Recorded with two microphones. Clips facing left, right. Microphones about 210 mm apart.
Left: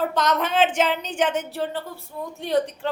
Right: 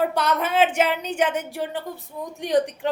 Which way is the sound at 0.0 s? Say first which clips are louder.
Even; 10° right (ahead or behind).